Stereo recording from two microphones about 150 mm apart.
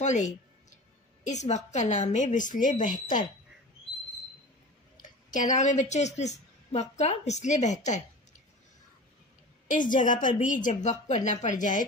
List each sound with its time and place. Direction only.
0.0 s a sound: 50° left (ahead or behind)
1.2 s a woman's voice: 50° left (ahead or behind)
5.0 s a woman's voice: 55° left (ahead or behind)
9.7 s a woman's voice: 60° left (ahead or behind)